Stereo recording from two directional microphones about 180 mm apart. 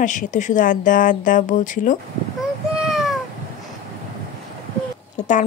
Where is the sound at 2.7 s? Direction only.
Centre (ahead or behind).